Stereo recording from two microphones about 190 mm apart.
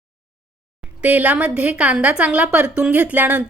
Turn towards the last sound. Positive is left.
turn(degrees=-10)  # may be behind; listen again after turning